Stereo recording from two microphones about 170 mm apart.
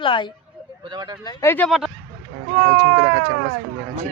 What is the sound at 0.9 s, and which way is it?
Speech, 20° right (ahead or behind).